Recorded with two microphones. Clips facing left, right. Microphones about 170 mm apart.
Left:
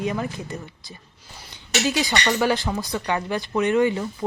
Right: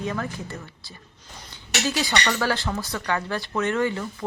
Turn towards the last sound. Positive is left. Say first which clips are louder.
# left 4 dB
turn(degrees=15)  # may be behind; listen again after turning